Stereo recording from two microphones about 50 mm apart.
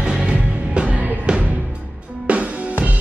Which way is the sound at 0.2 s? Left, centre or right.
Right.